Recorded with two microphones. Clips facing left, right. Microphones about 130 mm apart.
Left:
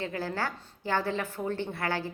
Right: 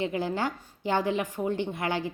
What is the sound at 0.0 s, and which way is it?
A woman's voice, 20° right (ahead or behind).